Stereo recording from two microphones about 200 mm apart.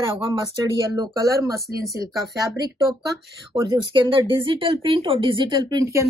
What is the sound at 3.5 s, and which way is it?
Speech, 20° right (ahead or behind).